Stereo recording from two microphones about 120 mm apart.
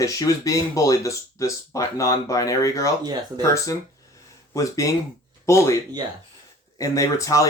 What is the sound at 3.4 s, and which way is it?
Speech, 25° left (ahead or behind).